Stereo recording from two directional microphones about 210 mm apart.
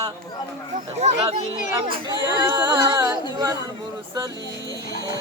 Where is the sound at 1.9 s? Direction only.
20° right (ahead or behind).